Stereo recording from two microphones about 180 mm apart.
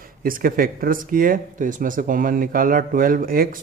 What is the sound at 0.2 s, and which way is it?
Speech, 50° right (ahead or behind).